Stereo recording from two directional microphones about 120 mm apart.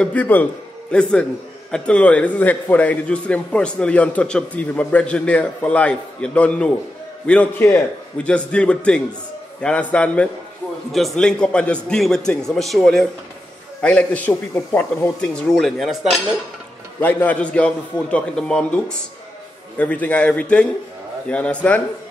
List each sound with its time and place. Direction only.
0.0 s a man's voice: 15° left (ahead or behind); by 16.2 s 5° right (ahead or behind)
17.0 s a man's voice: 15° left (ahead or behind)